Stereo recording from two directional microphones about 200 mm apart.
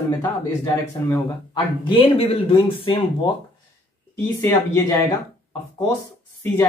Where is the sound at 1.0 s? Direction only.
10° left (ahead or behind).